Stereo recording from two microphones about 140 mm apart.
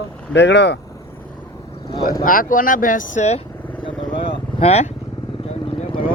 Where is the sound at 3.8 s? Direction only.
35° left (ahead or behind).